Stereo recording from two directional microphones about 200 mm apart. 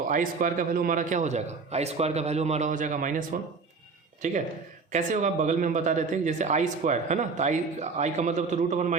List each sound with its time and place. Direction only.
0.1 s speech: 40° right (ahead or behind)